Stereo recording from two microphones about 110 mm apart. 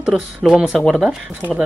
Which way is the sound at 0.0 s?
5° right (ahead or behind).